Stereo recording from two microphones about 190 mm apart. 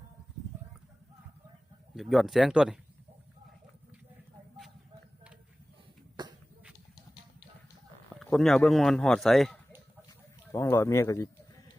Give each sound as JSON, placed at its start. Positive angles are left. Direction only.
{"t": 2.0, "sound": "speech", "side_deg": 0}
{"t": 6.2, "sound": "a sound", "side_deg": -20}
{"t": 8.2, "sound": "speech", "side_deg": 0}
{"t": 10.5, "sound": "speech", "side_deg": 15}